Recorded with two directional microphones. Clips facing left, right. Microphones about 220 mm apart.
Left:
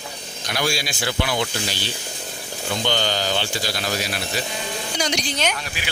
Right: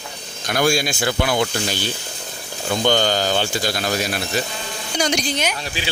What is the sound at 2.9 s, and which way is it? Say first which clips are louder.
Speech: right 6 dB; 45° right (ahead or behind).